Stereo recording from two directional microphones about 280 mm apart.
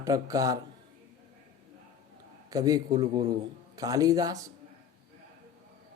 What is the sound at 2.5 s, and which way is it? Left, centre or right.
Speech, centre.